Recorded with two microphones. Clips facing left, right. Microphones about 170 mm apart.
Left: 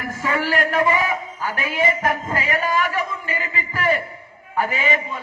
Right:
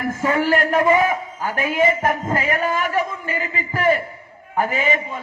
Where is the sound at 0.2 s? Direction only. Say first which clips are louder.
Right 3 dB; 45° right (ahead or behind).